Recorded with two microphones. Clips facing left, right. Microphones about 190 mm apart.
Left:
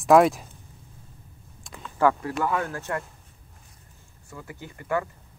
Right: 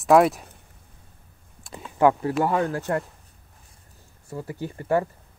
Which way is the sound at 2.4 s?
35° right (ahead or behind).